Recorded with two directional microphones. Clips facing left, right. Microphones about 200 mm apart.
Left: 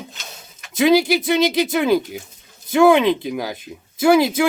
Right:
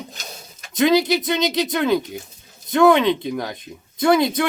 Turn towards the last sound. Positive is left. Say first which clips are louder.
# left 2 dB
turn(degrees=5)  # may be behind; listen again after turning